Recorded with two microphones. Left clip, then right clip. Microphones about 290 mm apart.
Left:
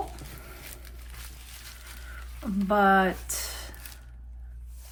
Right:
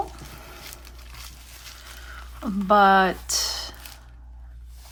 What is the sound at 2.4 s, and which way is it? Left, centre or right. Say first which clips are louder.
Speech: right 6 dB; centre.